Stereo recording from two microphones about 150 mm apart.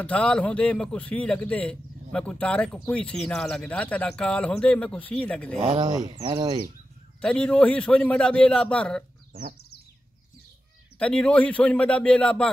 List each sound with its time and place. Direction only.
0.0 s a man's voice: 10° left (ahead or behind)
5.6 s speech: 35° right (ahead or behind)
7.2 s a man's voice: 5° left (ahead or behind)
9.3 s bird: 90° right
11.0 s a man's voice: 5° left (ahead or behind)